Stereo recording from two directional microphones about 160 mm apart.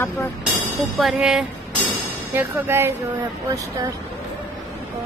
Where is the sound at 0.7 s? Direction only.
5° right (ahead or behind).